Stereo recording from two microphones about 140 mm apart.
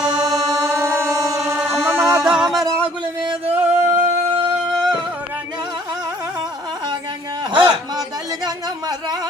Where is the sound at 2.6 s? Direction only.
25° right (ahead or behind).